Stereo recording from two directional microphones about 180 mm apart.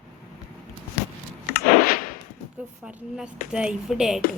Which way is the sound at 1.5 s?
55° left (ahead or behind).